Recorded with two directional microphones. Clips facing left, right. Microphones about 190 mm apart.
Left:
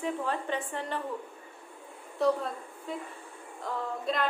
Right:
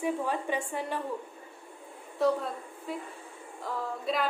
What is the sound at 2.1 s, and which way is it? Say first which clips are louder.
Speech: even; centre (ahead or behind).